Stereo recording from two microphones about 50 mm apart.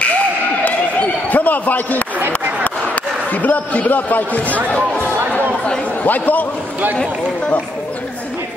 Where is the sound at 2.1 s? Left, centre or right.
Right.